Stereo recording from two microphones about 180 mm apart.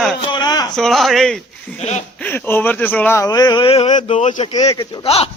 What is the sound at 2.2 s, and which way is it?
Speech, 10° left (ahead or behind).